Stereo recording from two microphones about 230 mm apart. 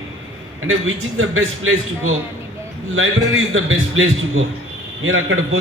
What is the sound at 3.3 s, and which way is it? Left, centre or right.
A man's voice, right.